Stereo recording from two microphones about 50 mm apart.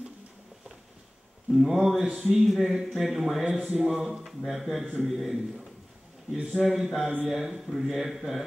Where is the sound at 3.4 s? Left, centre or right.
Right.